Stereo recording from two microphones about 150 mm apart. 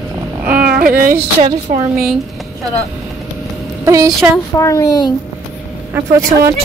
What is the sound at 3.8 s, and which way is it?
Speech, 20° right (ahead or behind).